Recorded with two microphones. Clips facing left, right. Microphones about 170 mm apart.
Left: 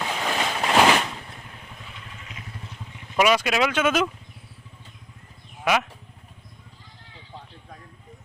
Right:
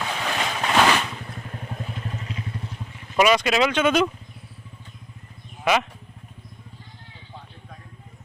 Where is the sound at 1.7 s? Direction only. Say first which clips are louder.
Right 10 dB; 45° right (ahead or behind).